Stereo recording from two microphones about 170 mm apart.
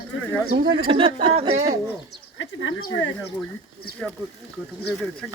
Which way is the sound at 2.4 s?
90° left.